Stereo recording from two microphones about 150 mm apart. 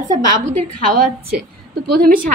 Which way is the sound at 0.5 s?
75° right (ahead or behind).